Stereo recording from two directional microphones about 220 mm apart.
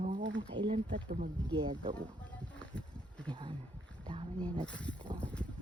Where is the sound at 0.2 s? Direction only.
55° right (ahead or behind).